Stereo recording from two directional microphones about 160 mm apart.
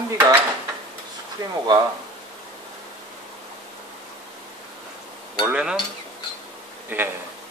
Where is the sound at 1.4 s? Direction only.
25° right (ahead or behind).